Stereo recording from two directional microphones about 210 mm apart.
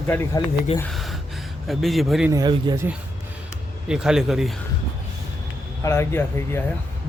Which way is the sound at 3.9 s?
5° right (ahead or behind).